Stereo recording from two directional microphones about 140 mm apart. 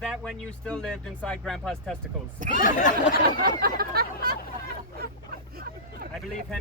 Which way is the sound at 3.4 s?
90° right.